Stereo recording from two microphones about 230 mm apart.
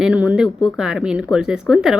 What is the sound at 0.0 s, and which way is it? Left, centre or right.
Speech, centre.